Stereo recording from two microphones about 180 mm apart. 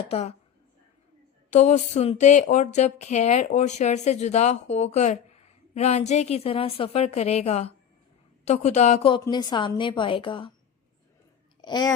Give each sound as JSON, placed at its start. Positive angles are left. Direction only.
{"t": 0.1, "sound": "speech", "side_deg": 35}
{"t": 1.5, "sound": "a woman's voice", "side_deg": 40}
{"t": 11.6, "sound": "speech", "side_deg": 25}